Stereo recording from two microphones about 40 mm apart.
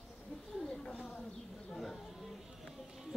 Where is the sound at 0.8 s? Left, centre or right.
Centre.